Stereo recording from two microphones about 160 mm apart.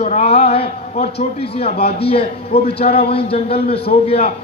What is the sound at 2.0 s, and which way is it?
A man's voice, 35° left (ahead or behind).